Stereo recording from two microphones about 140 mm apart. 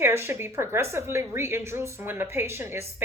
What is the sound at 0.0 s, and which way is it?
Speech, 20° right (ahead or behind).